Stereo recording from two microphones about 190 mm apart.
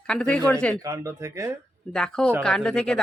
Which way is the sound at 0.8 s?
15° right (ahead or behind).